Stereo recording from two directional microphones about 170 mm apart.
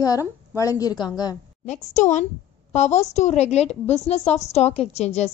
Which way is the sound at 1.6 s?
45° left (ahead or behind).